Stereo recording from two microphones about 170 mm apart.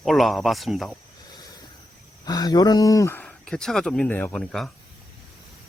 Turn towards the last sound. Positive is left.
turn(degrees=5)  # may be behind; listen again after turning